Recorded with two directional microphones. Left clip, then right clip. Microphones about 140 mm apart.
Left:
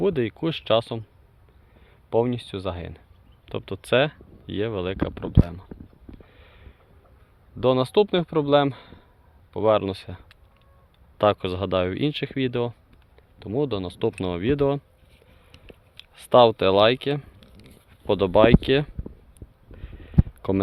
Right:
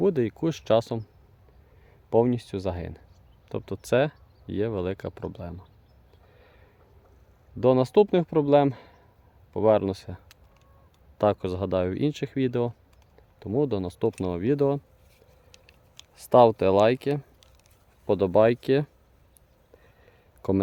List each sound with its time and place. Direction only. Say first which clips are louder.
0.0 s speech: left 1 dB; 20° right (ahead or behind)
2.0 s speech: even; 35° right (ahead or behind)
3.5 s speech: left 3 dB; 15° right (ahead or behind)
6.3 s sniff: left 3 dB; 20° right (ahead or behind)
7.6 s speech: even; 30° right (ahead or behind)
11.2 s speech: left 3 dB; 10° right (ahead or behind)
14.3 s speech: left 2 dB; 10° right (ahead or behind)
15.5 s a sound: left 1 dB; 40° right (ahead or behind)
16.1 s speech: left 2 dB; 15° right (ahead or behind)
20.4 s speech: even; 15° right (ahead or behind)